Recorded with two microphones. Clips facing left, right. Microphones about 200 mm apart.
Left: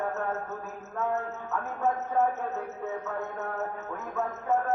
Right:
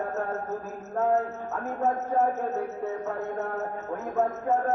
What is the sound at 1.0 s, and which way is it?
A man's voice, 35° right (ahead or behind).